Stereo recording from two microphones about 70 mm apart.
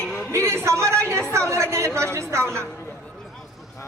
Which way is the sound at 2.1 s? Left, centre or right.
Right.